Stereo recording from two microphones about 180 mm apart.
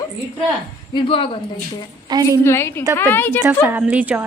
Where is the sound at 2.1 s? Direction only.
20° right (ahead or behind).